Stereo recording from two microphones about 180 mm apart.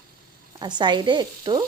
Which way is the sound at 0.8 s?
25° right (ahead or behind).